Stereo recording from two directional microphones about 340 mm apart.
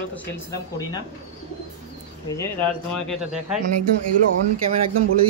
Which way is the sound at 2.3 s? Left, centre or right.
Centre.